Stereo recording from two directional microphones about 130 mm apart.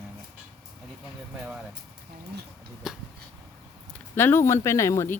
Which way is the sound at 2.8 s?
5° right (ahead or behind).